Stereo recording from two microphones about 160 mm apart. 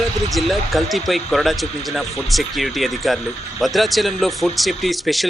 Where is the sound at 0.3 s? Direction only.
Centre (ahead or behind).